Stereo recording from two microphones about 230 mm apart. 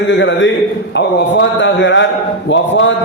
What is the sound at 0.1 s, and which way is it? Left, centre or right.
A man's voice, left.